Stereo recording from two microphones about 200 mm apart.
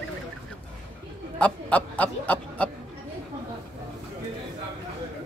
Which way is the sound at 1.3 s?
5° left (ahead or behind).